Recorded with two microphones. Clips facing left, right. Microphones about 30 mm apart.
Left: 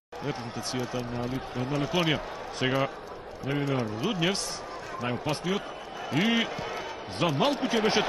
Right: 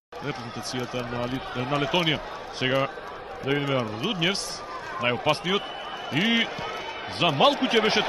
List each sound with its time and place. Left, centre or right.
0.2 s speech: centre
0.9 s speech: right
2.0 s speech: centre
3.4 s a man's voice: right
4.0 s speech: right
5.3 s a man's voice: right
6.1 s speech: centre
7.2 s a man's voice: right